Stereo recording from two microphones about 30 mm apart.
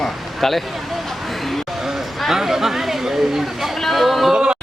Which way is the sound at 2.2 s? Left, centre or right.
Centre.